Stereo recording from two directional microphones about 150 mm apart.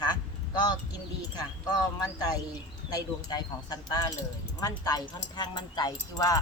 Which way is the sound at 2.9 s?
25° left (ahead or behind).